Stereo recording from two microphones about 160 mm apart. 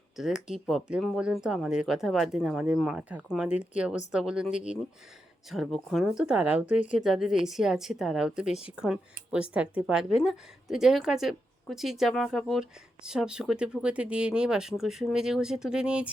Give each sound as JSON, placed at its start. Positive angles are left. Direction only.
{"t": 0.2, "sound": "speech", "side_deg": -5}
{"t": 6.7, "sound": "speech", "side_deg": 50}
{"t": 7.0, "sound": "speech", "side_deg": 0}